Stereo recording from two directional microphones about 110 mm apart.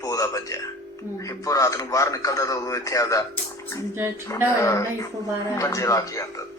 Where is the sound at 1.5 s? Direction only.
30° left (ahead or behind).